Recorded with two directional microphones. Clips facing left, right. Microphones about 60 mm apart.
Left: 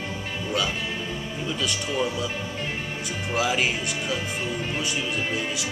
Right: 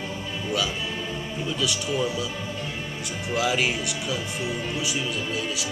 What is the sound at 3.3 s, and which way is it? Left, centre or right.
Speech, centre.